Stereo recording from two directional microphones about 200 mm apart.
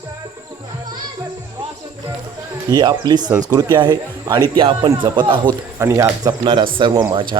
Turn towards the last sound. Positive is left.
turn(degrees=-25)  # may be behind; listen again after turning